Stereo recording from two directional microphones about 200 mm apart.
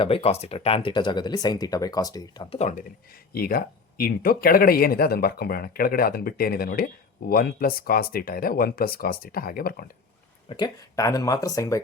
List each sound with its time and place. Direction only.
0.0 s speech: 30° left (ahead or behind)
2.6 s speech: 35° left (ahead or behind)
3.3 s speech: 50° left (ahead or behind)
10.5 s speech: 20° left (ahead or behind)